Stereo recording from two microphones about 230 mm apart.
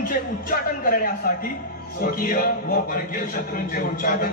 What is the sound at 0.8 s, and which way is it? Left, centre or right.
A man's voice, left.